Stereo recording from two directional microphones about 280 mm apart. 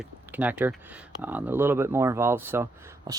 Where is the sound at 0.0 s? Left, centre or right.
Centre.